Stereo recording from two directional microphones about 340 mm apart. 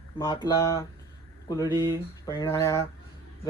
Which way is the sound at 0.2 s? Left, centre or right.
Centre.